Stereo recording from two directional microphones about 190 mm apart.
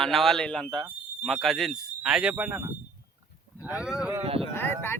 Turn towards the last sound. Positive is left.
turn(degrees=10)  # may be behind; listen again after turning